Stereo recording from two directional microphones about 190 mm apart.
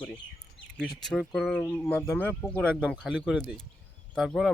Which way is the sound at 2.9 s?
5° right (ahead or behind).